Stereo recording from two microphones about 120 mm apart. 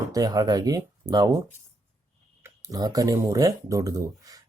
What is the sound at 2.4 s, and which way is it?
Speech, 30° right (ahead or behind).